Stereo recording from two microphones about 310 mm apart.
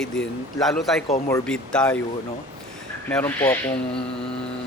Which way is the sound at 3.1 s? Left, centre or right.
Centre.